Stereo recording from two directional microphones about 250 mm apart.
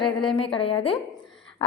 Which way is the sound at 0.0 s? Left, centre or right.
Centre.